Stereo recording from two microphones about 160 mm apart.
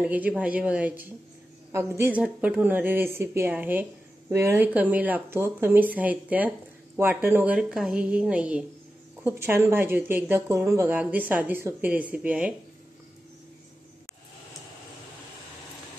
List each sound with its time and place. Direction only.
0.0 s speech: 10° right (ahead or behind)